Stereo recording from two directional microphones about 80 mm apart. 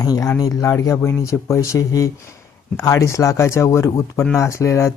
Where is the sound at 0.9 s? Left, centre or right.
Left.